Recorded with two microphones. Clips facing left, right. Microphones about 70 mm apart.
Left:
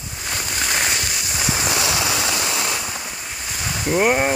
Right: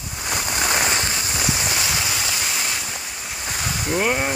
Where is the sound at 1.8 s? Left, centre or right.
Left.